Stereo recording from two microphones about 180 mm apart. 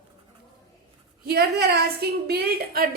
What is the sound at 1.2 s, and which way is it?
A woman's voice, 60° right (ahead or behind).